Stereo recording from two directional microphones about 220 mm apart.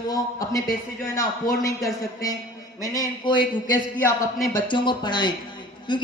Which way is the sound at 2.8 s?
15° left (ahead or behind).